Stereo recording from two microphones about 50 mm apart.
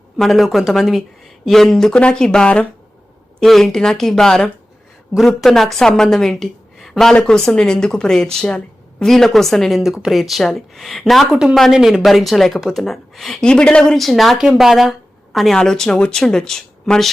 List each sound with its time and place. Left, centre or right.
0.2 s a woman's voice: centre
5.1 s a woman's voice: centre
12.0 s speech: centre
13.4 s a woman's voice: centre
13.9 s a woman's voice: centre
15.5 s a woman's voice: centre